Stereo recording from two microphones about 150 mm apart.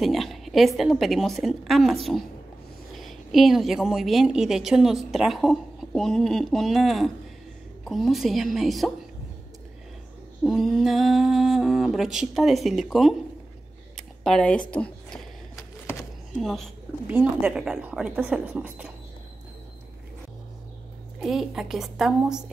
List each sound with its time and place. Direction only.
0.0 s a woman's voice: centre (ahead or behind)
10.4 s a woman's voice: centre (ahead or behind)
13.9 s a sound: 5° left (ahead or behind)
15.5 s a sound: 20° left (ahead or behind)
16.3 s a woman's voice: centre (ahead or behind)
17.1 s speech: 10° right (ahead or behind)
21.2 s a woman's voice: centre (ahead or behind)